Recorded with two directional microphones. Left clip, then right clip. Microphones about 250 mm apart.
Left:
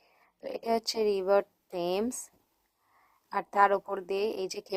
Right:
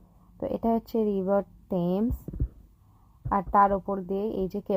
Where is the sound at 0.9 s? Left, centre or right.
Centre.